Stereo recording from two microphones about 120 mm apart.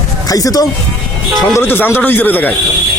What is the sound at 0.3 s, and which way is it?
Speech, 30° left (ahead or behind).